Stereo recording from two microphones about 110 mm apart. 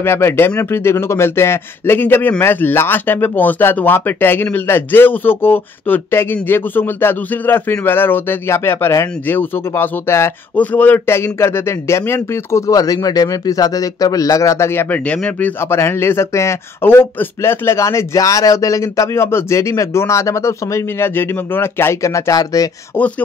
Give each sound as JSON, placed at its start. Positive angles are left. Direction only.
{"t": 0.0, "sound": "a man's voice", "side_deg": 20}